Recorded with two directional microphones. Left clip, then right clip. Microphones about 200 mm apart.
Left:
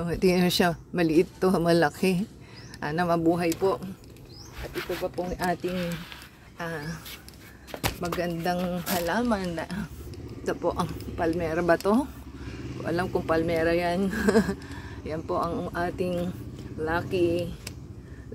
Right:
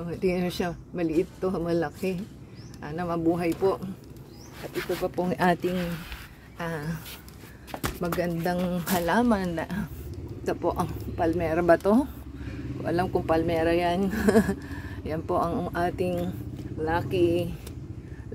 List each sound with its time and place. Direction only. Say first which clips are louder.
0.0 s speech: left 4 dB; 30° left (ahead or behind)
4.7 s speech: right 2 dB; 10° right (ahead or behind)
8.6 s speech: right 1 dB; 15° right (ahead or behind)